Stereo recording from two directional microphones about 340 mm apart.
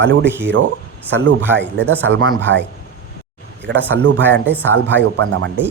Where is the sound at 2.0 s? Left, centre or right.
Right.